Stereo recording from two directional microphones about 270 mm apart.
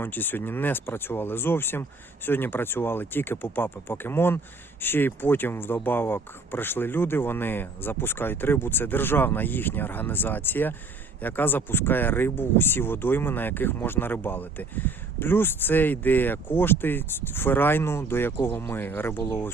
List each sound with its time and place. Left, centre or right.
0.0 s speech: centre